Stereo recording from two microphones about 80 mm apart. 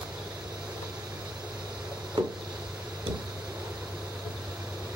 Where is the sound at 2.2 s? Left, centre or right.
Right.